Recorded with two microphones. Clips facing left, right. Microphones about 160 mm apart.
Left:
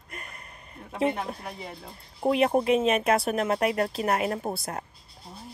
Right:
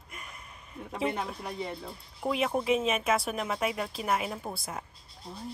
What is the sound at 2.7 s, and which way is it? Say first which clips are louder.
Speech: left 5 dB; centre (ahead or behind).